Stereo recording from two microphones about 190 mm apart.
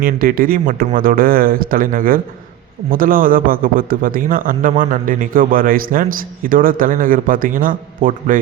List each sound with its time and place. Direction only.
0.0 s a man's voice: 50° right (ahead or behind)